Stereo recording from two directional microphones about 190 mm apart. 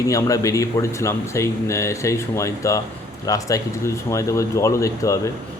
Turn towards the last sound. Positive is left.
turn(degrees=15)  # may be behind; listen again after turning